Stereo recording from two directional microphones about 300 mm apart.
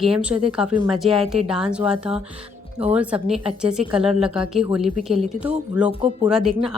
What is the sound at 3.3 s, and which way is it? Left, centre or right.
Speech, centre.